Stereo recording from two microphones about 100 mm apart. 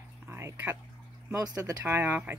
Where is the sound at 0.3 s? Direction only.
25° right (ahead or behind).